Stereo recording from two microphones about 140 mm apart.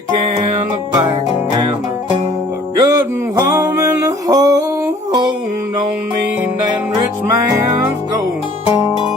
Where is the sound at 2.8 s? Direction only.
20° right (ahead or behind).